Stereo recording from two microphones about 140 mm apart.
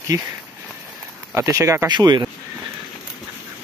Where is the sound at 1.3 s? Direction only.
20° right (ahead or behind).